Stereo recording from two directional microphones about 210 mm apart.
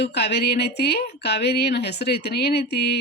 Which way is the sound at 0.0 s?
55° left (ahead or behind).